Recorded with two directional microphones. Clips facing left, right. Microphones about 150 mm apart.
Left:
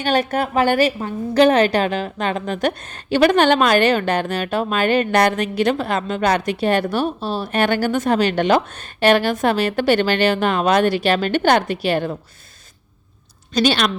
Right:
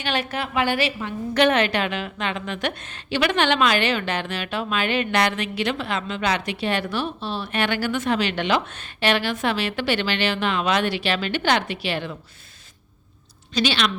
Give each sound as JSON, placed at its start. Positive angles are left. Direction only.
{"t": 0.0, "sound": "a woman's voice", "side_deg": 45}
{"t": 13.5, "sound": "a woman's voice", "side_deg": 45}